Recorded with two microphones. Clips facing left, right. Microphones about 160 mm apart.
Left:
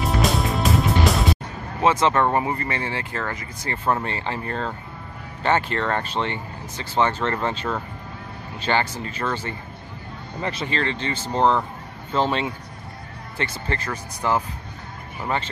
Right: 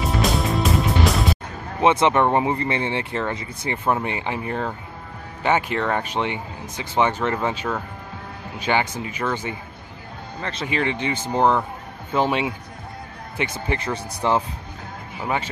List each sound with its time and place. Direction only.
0.0 s music: centre (ahead or behind)
1.8 s speech: 20° right (ahead or behind)
10.7 s speech: 15° right (ahead or behind)
15.2 s speech: 10° right (ahead or behind)